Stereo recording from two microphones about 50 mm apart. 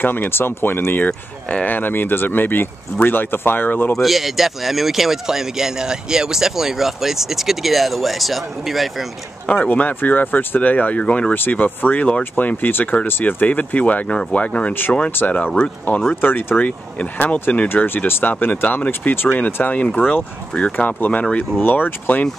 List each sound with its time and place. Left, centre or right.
0.0 s speech: left
3.9 s speech: centre
9.5 s speech: left
11.3 s speech: left
14.7 s speech: left
16.6 s speech: left
17.8 s speech: left
20.0 s speech: left
21.5 s speech: left